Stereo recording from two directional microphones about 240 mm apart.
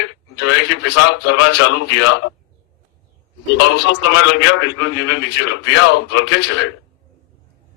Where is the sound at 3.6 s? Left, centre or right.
Left.